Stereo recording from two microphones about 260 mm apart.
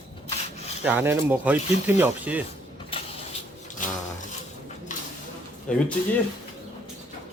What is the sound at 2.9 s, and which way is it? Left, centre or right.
Vehicle, left.